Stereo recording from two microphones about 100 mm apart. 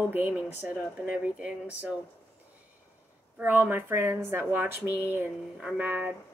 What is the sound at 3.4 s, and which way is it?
Speech, 20° right (ahead or behind).